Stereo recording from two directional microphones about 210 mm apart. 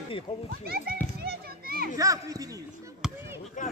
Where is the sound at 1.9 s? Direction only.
15° right (ahead or behind).